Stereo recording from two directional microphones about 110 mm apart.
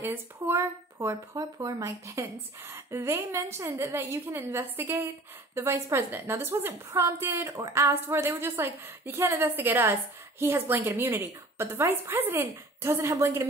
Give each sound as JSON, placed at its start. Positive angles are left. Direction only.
{"t": 0.0, "sound": "speech", "side_deg": -20}